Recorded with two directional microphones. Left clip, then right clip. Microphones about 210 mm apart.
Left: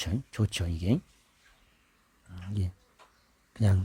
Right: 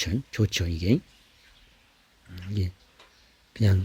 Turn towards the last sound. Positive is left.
turn(degrees=15)  # may be behind; listen again after turning